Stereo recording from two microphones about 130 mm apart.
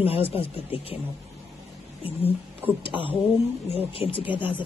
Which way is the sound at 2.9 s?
15° right (ahead or behind).